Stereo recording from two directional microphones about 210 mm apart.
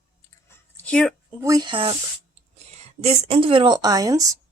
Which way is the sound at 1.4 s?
15° right (ahead or behind).